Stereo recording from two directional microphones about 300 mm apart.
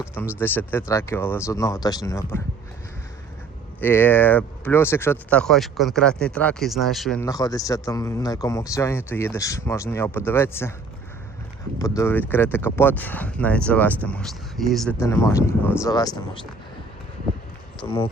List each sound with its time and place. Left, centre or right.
0.3 s speech: centre
3.8 s speech: centre
11.8 s speech: centre
17.7 s speech: centre